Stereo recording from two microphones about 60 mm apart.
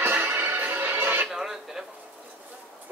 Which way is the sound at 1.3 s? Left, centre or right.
Centre.